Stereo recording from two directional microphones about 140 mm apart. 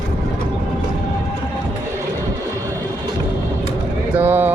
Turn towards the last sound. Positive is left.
turn(degrees=-15)  # may be behind; listen again after turning